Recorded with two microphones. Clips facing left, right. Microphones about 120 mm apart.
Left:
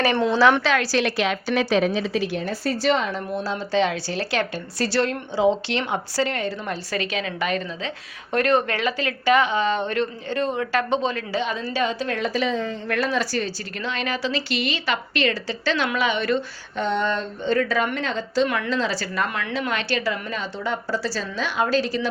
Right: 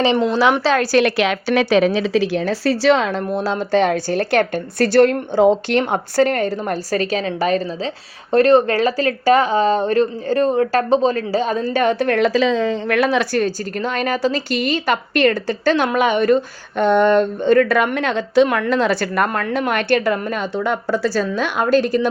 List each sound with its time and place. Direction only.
0.2 s a woman's voice: 15° right (ahead or behind)
0.6 s a woman's voice: 35° right (ahead or behind)
0.9 s a woman's voice: 60° right (ahead or behind)